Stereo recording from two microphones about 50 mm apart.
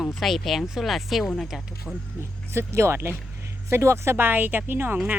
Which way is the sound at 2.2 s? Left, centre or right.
Right.